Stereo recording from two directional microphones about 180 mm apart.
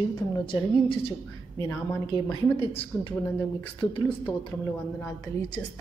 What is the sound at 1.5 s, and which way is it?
Speech, 15° left (ahead or behind).